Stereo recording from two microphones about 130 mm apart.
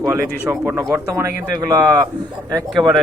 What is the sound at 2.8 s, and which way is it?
Speech, 30° right (ahead or behind).